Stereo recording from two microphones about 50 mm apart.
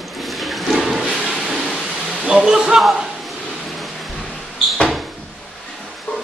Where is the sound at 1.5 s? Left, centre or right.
Centre.